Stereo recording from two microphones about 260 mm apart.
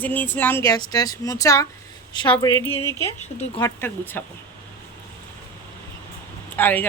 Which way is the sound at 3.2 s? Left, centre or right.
Left.